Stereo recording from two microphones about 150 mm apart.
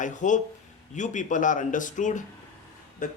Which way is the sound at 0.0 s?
55° left (ahead or behind).